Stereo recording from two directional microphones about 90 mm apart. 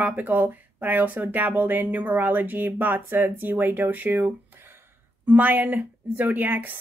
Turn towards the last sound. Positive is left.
turn(degrees=-20)  # may be behind; listen again after turning